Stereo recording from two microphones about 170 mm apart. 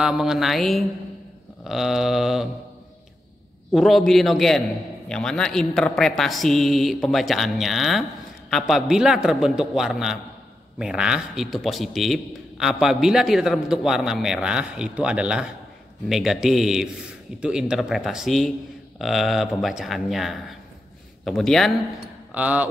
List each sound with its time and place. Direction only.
0.0 s a man's voice: 5° right (ahead or behind)
3.7 s a man's voice: centre (ahead or behind)
22.3 s speech: 10° right (ahead or behind)